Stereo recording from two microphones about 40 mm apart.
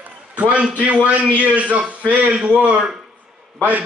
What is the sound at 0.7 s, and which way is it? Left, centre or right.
Speech, right.